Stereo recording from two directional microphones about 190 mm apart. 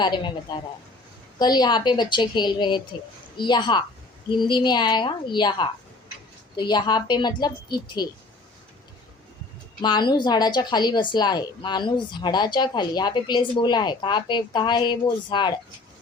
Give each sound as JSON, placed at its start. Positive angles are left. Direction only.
{"t": 0.0, "sound": "speech", "side_deg": 25}
{"t": 9.8, "sound": "speech", "side_deg": 25}